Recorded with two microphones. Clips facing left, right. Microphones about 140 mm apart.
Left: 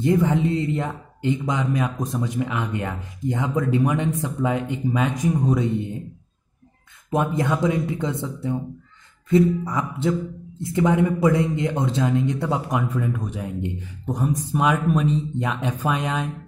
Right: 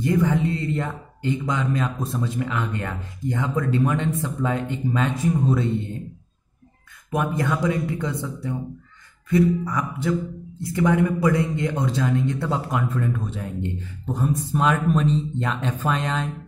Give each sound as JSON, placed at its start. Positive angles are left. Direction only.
{"t": 0.0, "sound": "a man's voice", "side_deg": 20}
{"t": 7.1, "sound": "a man's voice", "side_deg": 25}